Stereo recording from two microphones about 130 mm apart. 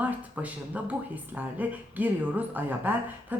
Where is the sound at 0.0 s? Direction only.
10° right (ahead or behind).